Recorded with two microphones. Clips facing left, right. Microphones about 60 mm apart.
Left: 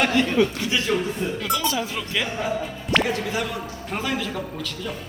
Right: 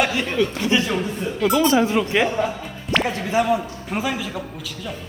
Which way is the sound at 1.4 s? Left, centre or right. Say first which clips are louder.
Right 11 dB; centre.